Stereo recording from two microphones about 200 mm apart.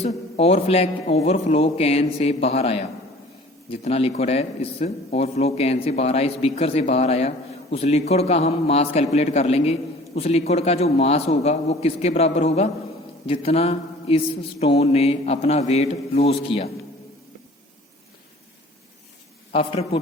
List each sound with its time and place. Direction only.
0.0 s a man's voice: 30° left (ahead or behind)
13.2 s mantra: 30° left (ahead or behind)
14.6 s a man's voice: 30° left (ahead or behind)
19.5 s a man's voice: 30° left (ahead or behind)